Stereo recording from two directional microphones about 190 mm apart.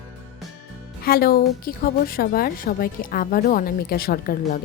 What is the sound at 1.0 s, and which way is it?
A woman's voice, 50° left (ahead or behind).